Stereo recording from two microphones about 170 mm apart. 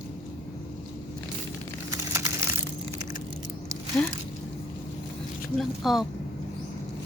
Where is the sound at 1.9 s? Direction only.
20° right (ahead or behind).